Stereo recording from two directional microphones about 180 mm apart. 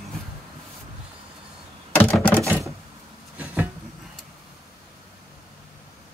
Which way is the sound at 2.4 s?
15° right (ahead or behind).